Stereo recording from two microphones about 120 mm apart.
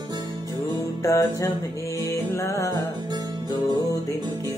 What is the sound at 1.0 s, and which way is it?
Music, 25° left (ahead or behind).